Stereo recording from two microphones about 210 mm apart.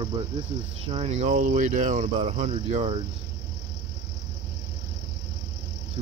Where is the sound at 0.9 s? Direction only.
30° right (ahead or behind).